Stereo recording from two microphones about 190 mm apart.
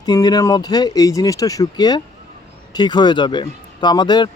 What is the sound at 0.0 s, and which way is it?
Speech, 20° left (ahead or behind).